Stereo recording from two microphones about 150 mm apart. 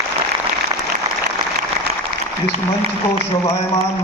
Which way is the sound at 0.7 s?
25° right (ahead or behind).